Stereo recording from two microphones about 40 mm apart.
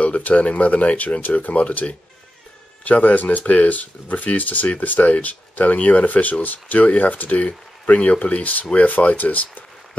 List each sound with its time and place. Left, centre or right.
0.0 s speech: left